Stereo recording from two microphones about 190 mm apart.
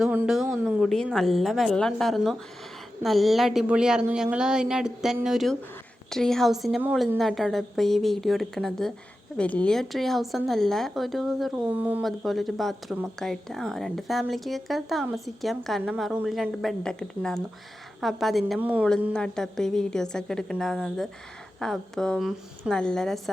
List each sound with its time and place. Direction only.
0.0 s a woman's voice: 5° right (ahead or behind)
19.1 s a woman's voice: 5° left (ahead or behind)